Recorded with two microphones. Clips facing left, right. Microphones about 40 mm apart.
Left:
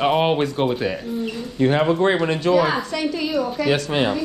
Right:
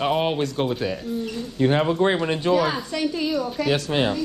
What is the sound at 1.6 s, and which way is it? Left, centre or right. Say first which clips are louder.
A woman's voice: left 2 dB; centre.